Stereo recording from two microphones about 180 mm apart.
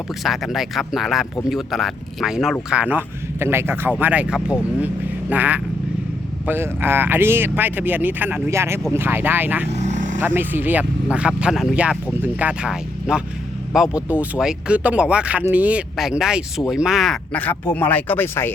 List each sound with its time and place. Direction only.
0.2 s speech: centre (ahead or behind)
9.6 s vehicle: 40° right (ahead or behind)
10.2 s speech: 10° right (ahead or behind); by 18.5 s 10° left (ahead or behind)